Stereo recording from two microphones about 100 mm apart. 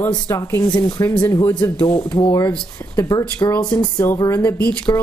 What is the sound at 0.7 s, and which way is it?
Speech, 40° left (ahead or behind).